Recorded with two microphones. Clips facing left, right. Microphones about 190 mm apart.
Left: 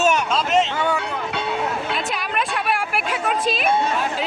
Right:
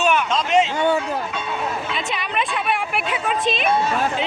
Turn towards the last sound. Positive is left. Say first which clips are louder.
# even
turn(degrees=5)  # may be behind; listen again after turning